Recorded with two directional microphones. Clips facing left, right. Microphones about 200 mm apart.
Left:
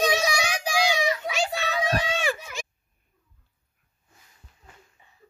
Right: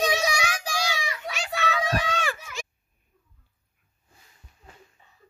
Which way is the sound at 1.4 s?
30° left (ahead or behind).